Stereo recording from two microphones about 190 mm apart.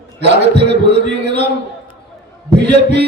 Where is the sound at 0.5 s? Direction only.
60° right (ahead or behind).